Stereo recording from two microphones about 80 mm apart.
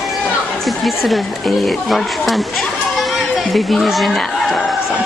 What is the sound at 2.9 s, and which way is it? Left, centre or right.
Chicken, centre.